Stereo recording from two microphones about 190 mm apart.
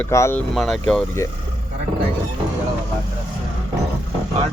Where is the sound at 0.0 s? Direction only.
15° left (ahead or behind).